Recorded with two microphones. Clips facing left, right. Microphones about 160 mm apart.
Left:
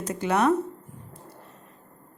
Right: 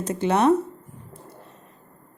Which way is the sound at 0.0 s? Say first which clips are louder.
Right 3 dB; 25° right (ahead or behind).